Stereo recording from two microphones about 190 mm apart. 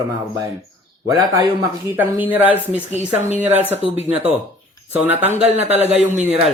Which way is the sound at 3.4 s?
10° right (ahead or behind).